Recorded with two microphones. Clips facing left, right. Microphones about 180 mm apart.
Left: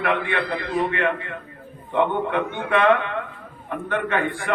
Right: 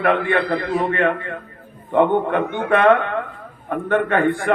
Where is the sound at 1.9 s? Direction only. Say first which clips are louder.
Right 5 dB; 45° right (ahead or behind).